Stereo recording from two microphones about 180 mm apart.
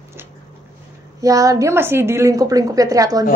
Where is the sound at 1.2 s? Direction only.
20° right (ahead or behind).